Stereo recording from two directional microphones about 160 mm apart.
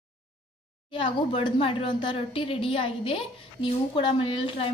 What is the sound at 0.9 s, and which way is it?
Speech, 30° left (ahead or behind).